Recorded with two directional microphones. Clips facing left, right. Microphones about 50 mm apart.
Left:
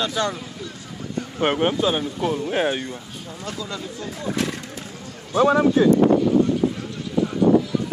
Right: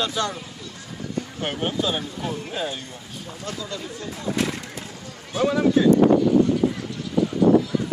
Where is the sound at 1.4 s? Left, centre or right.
Left.